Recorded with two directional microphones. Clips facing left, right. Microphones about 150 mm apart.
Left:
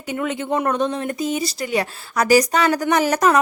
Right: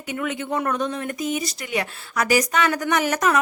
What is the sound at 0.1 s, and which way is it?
Speech, 30° left (ahead or behind).